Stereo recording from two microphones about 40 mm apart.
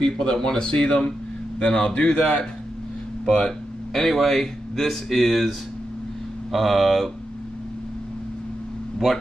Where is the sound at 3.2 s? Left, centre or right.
Centre.